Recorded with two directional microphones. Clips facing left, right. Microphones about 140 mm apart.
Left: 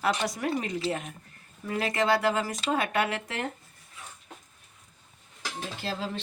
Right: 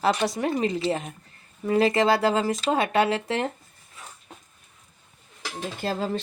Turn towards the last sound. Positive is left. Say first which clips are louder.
# right 6 dB
turn(degrees=-45)  # may be behind; listen again after turning